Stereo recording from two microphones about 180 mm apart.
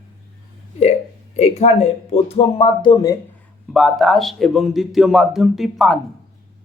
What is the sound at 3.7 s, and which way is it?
A man's voice, centre (ahead or behind).